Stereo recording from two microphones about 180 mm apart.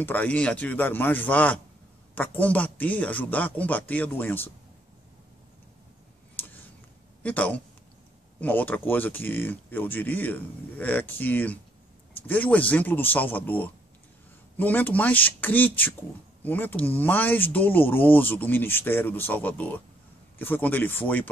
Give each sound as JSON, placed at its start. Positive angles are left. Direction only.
{"t": 0.0, "sound": "speech", "side_deg": 10}
{"t": 7.2, "sound": "speech", "side_deg": 10}